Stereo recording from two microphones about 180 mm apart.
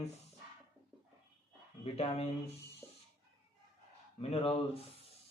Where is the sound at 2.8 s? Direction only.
15° left (ahead or behind).